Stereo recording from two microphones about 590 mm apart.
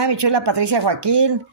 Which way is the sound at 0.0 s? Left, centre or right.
Right.